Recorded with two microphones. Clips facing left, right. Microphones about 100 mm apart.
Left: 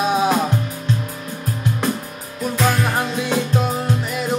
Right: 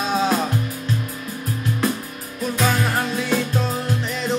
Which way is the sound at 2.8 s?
15° left (ahead or behind).